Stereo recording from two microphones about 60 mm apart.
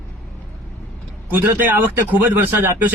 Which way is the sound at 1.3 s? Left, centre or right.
Right.